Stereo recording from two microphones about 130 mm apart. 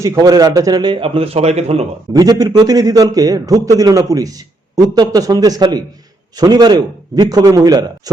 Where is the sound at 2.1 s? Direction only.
30° right (ahead or behind).